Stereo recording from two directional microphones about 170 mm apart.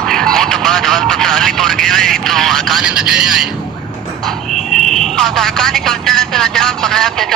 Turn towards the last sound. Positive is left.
turn(degrees=0)  # may be behind; listen again after turning